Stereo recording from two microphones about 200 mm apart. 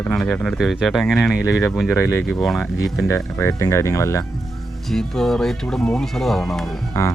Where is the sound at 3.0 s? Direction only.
15° left (ahead or behind).